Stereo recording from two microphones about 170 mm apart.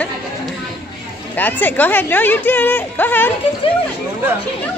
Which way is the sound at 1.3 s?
10° left (ahead or behind).